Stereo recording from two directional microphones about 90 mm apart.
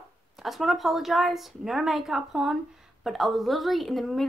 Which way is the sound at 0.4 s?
Centre (ahead or behind).